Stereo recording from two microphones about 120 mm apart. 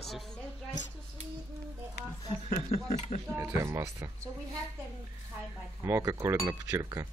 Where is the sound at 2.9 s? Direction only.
65° left (ahead or behind).